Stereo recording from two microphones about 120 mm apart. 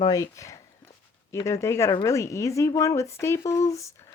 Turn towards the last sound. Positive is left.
turn(degrees=25)  # may be behind; listen again after turning